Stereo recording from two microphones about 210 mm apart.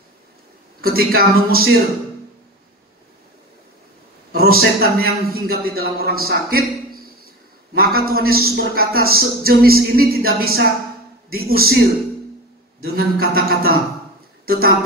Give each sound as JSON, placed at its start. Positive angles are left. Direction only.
{"t": 0.7, "sound": "a man's voice", "side_deg": -45}
{"t": 4.3, "sound": "a man's voice", "side_deg": -45}
{"t": 12.8, "sound": "a man's voice", "side_deg": -45}